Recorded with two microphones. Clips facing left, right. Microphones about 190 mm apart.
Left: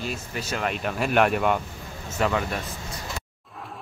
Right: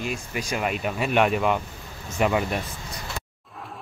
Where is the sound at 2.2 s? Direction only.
15° right (ahead or behind).